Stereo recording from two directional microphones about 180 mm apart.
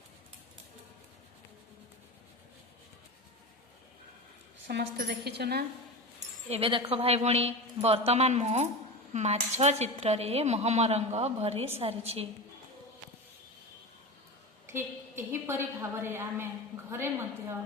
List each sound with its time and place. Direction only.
4.7 s a woman's voice: 65° right (ahead or behind)
6.5 s speech: 30° right (ahead or behind)
14.7 s a woman's voice: 15° right (ahead or behind)